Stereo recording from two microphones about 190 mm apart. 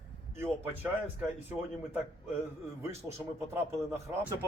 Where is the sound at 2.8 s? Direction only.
15° right (ahead or behind).